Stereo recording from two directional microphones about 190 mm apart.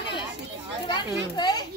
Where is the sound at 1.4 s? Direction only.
20° left (ahead or behind).